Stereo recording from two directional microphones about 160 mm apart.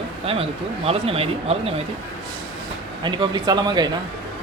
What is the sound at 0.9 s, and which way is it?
Speech, 40° right (ahead or behind).